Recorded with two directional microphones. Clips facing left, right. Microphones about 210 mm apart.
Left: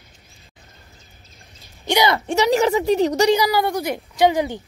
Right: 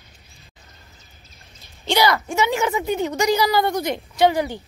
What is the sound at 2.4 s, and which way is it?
Speech, 35° left (ahead or behind).